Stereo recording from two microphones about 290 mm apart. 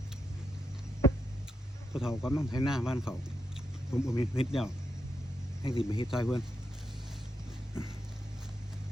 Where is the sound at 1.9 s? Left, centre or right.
Centre.